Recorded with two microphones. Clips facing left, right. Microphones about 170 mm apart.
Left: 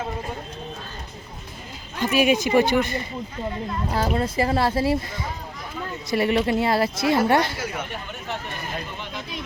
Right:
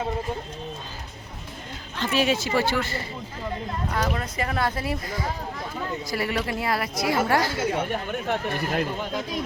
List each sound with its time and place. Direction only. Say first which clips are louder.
2.0 s speech: left 4 dB; 10° left (ahead or behind)
3.8 s speech: left 4 dB; 30° left (ahead or behind)
7.5 s speech: right 5 dB; 25° right (ahead or behind)
8.3 s speech: right 5 dB; 70° right (ahead or behind)
9.0 s speech: right 5 dB; 40° right (ahead or behind)